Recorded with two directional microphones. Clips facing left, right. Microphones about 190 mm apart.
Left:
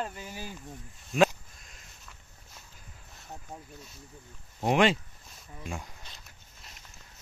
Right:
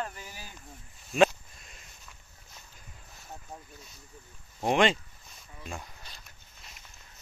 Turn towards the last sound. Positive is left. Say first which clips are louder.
# left 2 dB
turn(degrees=10)  # may be behind; listen again after turning